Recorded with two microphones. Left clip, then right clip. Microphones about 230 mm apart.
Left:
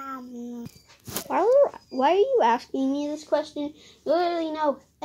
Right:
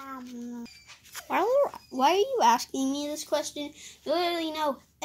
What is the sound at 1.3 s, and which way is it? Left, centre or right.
A child's voice, right.